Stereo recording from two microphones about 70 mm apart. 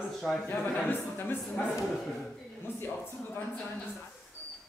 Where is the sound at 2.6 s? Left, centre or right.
Left.